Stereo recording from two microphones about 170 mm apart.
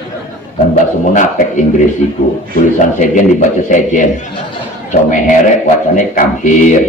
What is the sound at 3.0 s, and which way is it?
A man's voice, 45° left (ahead or behind).